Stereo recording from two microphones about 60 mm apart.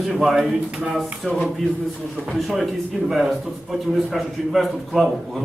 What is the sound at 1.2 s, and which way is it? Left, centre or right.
A man's voice, centre.